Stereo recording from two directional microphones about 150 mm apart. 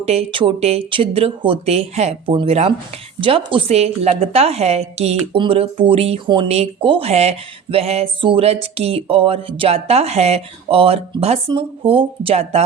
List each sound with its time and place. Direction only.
0.0 s a woman's voice: 45° right (ahead or behind)